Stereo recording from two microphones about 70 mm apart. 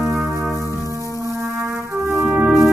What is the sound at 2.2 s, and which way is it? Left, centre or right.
Music, right.